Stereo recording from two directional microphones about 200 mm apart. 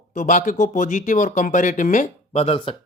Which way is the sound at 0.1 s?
40° left (ahead or behind).